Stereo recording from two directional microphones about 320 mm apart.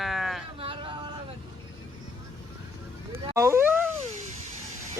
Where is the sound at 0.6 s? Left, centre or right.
Centre.